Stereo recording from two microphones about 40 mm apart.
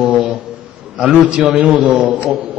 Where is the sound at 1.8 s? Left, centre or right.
Right.